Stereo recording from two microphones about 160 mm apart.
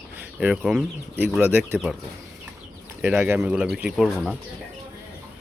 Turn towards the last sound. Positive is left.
turn(degrees=0)  # may be behind; listen again after turning